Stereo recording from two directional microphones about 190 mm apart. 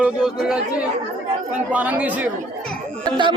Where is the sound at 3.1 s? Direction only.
25° right (ahead or behind).